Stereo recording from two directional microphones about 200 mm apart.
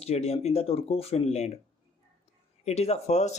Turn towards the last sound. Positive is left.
turn(degrees=35)  # may be behind; listen again after turning